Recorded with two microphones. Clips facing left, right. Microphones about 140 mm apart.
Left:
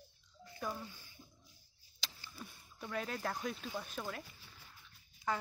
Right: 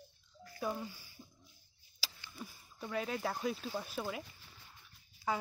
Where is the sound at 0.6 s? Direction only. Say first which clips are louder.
Right 4 dB; 10° right (ahead or behind).